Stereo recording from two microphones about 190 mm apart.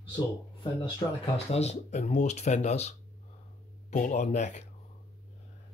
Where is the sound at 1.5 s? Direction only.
35° left (ahead or behind).